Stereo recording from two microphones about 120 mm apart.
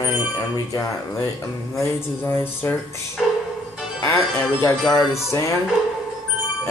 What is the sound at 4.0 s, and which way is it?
Music, 25° left (ahead or behind).